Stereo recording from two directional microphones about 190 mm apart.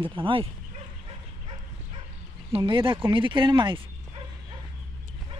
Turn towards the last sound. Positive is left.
turn(degrees=-25)  # may be behind; listen again after turning